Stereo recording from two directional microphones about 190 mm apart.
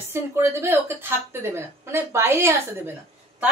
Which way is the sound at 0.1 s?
15° right (ahead or behind).